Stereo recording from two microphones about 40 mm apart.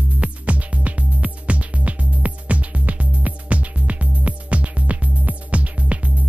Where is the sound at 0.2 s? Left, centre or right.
Right.